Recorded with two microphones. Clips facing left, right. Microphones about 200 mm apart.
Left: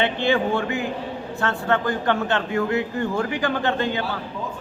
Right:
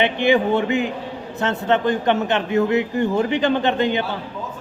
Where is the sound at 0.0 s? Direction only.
15° right (ahead or behind).